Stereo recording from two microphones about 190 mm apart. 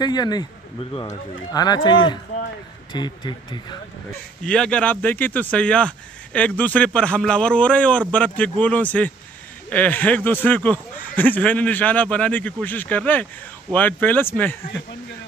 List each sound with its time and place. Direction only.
0.0 s speech: 20° left (ahead or behind)
4.4 s speech: 5° left (ahead or behind)